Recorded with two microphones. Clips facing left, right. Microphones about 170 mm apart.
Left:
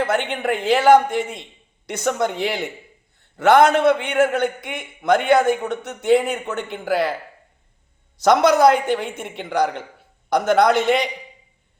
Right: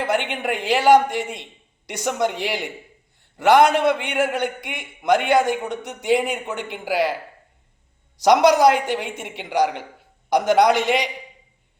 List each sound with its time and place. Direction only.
0.0 s a man's voice: 15° right (ahead or behind)
8.2 s a man's voice: 15° right (ahead or behind)